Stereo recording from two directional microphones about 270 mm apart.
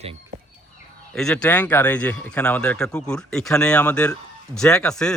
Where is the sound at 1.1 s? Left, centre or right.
Centre.